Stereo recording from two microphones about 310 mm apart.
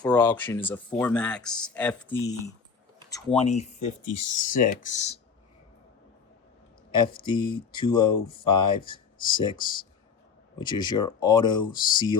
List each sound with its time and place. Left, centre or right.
0.0 s speech: centre; by 5.2 s left
6.9 s speech: centre